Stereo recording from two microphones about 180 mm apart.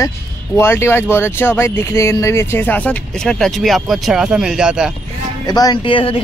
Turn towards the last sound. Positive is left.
turn(degrees=30)  # may be behind; listen again after turning